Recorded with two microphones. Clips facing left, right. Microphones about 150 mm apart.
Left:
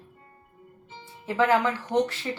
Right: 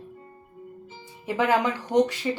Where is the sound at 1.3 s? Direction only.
15° right (ahead or behind).